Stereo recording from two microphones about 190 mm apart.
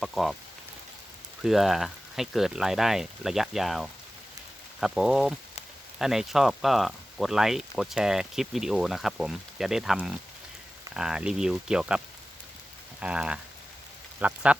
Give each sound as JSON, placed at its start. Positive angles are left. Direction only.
{"t": 0.0, "sound": "speech", "side_deg": 0}
{"t": 1.5, "sound": "speech", "side_deg": 0}